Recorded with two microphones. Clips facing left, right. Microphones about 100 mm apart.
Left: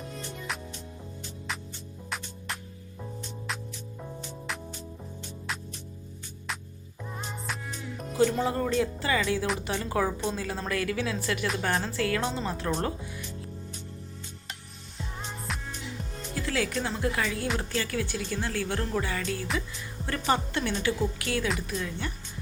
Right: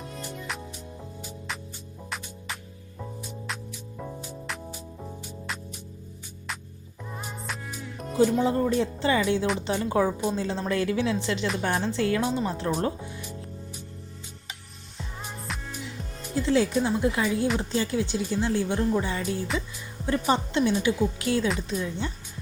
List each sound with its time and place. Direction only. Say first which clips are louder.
0.0 s music: right 1 dB; 5° right (ahead or behind)
2.0 s music: even; centre (ahead or behind)
7.2 s music: even; 10° right (ahead or behind)
8.2 s speech: right 3 dB; 15° right (ahead or behind)
14.9 s music: even; centre (ahead or behind)
16.3 s speech: right 7 dB; 20° right (ahead or behind)